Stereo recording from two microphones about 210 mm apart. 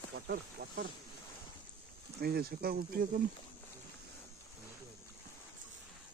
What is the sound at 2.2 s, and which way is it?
Speech, 50° right (ahead or behind).